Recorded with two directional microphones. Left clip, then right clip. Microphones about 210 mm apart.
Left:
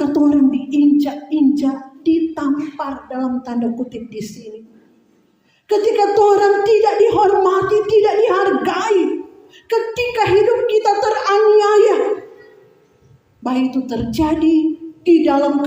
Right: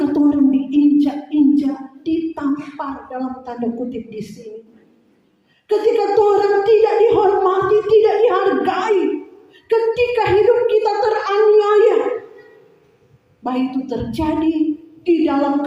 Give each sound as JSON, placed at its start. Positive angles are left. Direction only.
{"t": 0.0, "sound": "a sound", "side_deg": 45}
{"t": 5.6, "sound": "speech", "side_deg": 50}
{"t": 13.4, "sound": "speech", "side_deg": 50}